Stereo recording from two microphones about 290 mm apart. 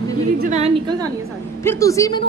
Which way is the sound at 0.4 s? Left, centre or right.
Right.